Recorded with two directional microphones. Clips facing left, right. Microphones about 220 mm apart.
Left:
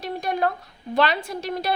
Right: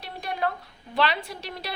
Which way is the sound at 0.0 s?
45° left (ahead or behind).